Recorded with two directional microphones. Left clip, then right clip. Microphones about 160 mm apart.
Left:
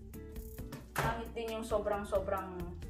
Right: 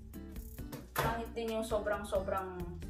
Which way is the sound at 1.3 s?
Centre (ahead or behind).